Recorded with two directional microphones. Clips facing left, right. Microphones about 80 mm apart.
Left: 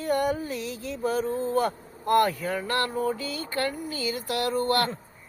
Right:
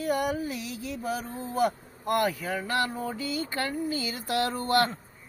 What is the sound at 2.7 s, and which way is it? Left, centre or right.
Speech, centre.